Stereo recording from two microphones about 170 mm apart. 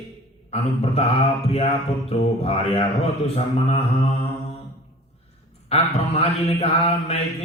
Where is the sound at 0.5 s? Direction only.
35° left (ahead or behind).